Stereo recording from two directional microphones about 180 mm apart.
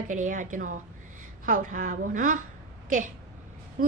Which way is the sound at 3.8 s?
50° right (ahead or behind).